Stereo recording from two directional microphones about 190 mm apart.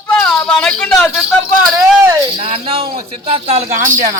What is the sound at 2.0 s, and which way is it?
Speech, 15° right (ahead or behind).